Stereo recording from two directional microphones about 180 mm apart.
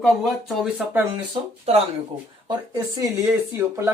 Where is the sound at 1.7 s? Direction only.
35° right (ahead or behind).